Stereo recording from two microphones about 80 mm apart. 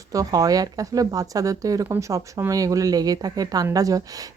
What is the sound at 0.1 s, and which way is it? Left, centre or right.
Speech, right.